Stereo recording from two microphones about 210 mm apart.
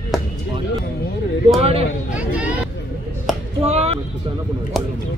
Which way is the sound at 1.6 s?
30° right (ahead or behind).